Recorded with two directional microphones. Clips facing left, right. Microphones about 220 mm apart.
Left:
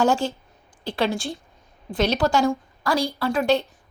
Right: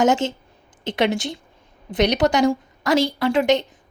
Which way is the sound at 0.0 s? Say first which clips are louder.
Right 2 dB; 20° right (ahead or behind).